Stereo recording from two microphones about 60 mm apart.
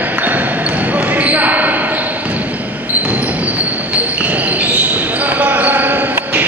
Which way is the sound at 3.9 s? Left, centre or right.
Right.